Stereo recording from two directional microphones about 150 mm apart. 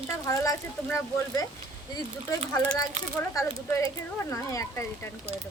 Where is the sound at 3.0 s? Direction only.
55° right (ahead or behind).